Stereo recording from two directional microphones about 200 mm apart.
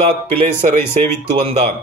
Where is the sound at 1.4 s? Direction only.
35° right (ahead or behind).